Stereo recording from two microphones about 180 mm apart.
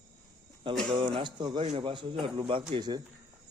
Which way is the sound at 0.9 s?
30° right (ahead or behind).